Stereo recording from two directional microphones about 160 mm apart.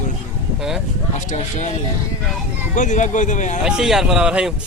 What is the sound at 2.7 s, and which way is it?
Speech, 50° left (ahead or behind).